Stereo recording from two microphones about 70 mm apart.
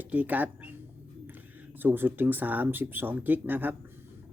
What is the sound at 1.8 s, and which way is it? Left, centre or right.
A man's voice, right.